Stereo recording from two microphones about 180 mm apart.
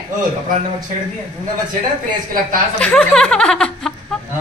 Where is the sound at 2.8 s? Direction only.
5° left (ahead or behind).